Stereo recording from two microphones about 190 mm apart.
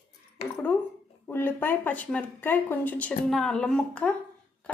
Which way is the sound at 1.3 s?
10° left (ahead or behind).